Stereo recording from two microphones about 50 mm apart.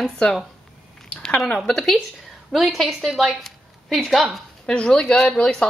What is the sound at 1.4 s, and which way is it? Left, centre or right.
Speech, centre.